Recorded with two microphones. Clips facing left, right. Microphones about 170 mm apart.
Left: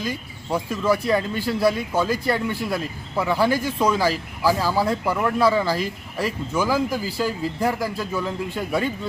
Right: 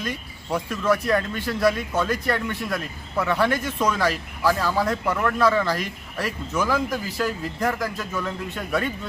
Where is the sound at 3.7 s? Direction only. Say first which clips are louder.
Left 3 dB; 30° left (ahead or behind).